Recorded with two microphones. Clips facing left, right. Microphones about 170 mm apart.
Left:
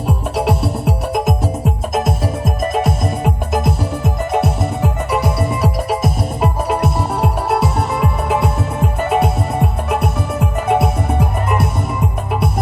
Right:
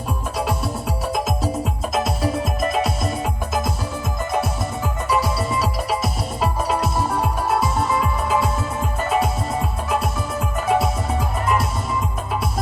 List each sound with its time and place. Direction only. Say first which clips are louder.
0.3 s music: left 6 dB; 70° left (ahead or behind)
1.9 s music: left 1 dB; 50° left (ahead or behind)